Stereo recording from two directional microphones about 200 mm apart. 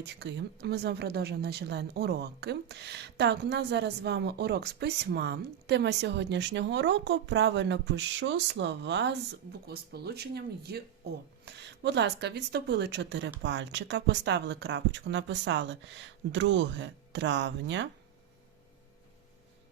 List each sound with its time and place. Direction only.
0.0 s speech: 60° right (ahead or behind)